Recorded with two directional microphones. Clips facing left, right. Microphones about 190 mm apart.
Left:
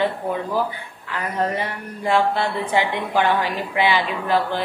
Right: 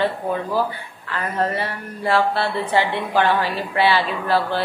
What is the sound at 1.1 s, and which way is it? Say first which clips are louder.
Speech: right 1 dB; 15° left (ahead or behind).